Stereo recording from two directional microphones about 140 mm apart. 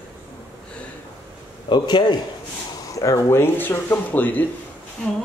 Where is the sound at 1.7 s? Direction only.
35° left (ahead or behind).